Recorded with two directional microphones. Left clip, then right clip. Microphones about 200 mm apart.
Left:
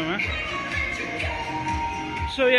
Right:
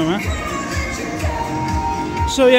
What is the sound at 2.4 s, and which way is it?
Speech, 20° right (ahead or behind).